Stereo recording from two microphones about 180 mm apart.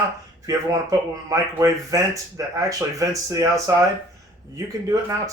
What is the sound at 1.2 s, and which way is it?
Speech, 20° right (ahead or behind).